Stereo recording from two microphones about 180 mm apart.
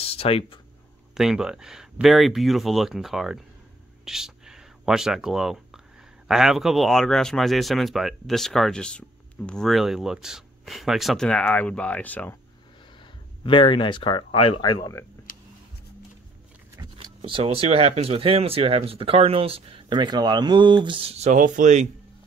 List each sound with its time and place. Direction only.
0.0 s speech: 35° left (ahead or behind)
1.1 s speech: 5° right (ahead or behind)
4.0 s a sound: 5° right (ahead or behind)
6.2 s speech: centre (ahead or behind)
13.4 s speech: 30° left (ahead or behind)
16.7 s speech: 25° right (ahead or behind); by 21.8 s 45° right (ahead or behind)